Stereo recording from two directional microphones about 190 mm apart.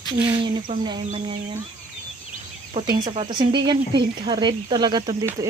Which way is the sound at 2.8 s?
25° right (ahead or behind).